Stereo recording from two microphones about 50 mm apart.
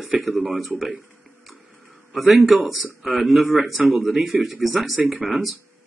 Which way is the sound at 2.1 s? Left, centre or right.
Centre.